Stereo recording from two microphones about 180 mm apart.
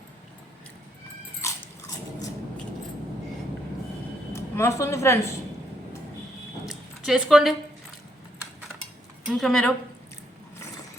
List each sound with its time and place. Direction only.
1.4 s biting: 15° left (ahead or behind)
4.3 s a woman's voice: 15° left (ahead or behind)
6.7 s a sound: centre (ahead or behind)
9.2 s speech: centre (ahead or behind)